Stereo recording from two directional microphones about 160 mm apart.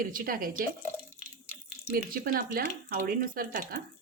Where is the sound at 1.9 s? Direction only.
60° right (ahead or behind).